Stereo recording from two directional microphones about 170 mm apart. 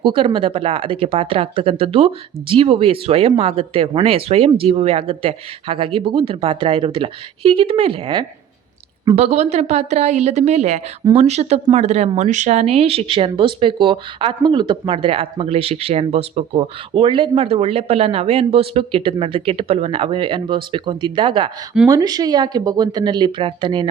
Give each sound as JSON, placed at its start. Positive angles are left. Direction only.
{"t": 0.0, "sound": "speech", "side_deg": -30}